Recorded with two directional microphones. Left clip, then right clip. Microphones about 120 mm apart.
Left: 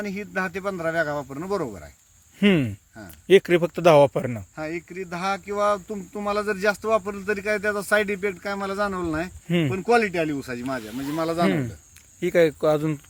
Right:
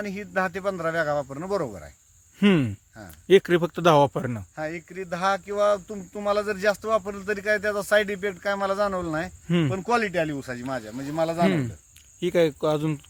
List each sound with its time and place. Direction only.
0.0 s speech: 30° right (ahead or behind)
3.2 s speech: 15° right (ahead or behind)
4.3 s speech: 25° right (ahead or behind)
12.2 s speech: 5° right (ahead or behind)